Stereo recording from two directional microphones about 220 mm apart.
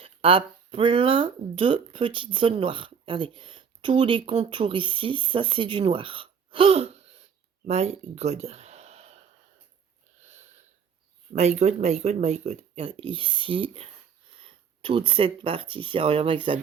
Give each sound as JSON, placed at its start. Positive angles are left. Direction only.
{"t": 0.0, "sound": "speech", "side_deg": -25}
{"t": 10.2, "sound": "a sound", "side_deg": -30}
{"t": 11.3, "sound": "speech", "side_deg": -30}